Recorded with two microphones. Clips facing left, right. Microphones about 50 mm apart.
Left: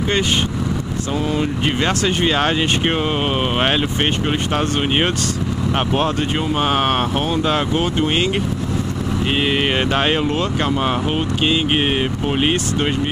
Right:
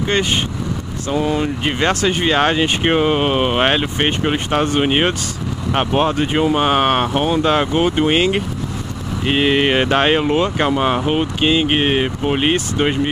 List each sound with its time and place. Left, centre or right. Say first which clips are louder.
1.1 s speech: right 3 dB; centre